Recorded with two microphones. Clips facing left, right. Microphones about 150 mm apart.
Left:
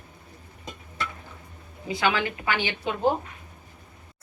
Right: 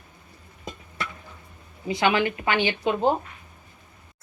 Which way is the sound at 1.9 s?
25° right (ahead or behind).